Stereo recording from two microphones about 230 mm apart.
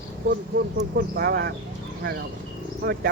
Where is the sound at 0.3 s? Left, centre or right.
Right.